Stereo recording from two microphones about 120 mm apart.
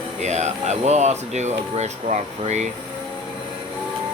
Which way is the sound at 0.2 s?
70° right (ahead or behind).